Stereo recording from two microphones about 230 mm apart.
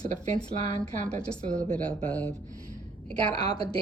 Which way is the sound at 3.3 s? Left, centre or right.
Centre.